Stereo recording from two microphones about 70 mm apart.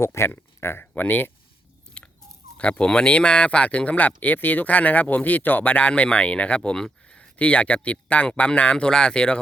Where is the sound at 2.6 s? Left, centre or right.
Centre.